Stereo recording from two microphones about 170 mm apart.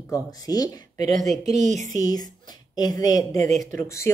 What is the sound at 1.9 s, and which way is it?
Speech, 25° left (ahead or behind).